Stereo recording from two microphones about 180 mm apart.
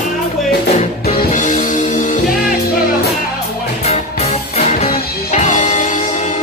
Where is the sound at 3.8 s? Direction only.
40° left (ahead or behind).